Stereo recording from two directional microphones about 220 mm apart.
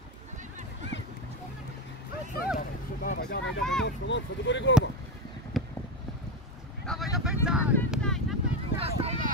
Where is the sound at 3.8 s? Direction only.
55° left (ahead or behind).